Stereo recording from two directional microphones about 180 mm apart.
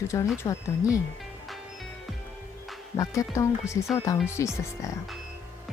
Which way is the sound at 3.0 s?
15° left (ahead or behind).